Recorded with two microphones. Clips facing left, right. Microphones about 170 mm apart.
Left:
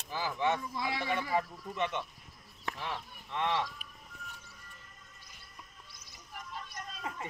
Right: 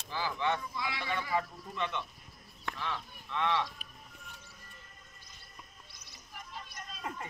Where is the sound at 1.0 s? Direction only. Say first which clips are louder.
Left 1 dB; 15° left (ahead or behind).